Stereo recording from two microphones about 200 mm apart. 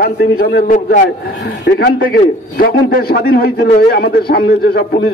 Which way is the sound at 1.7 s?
55° left (ahead or behind).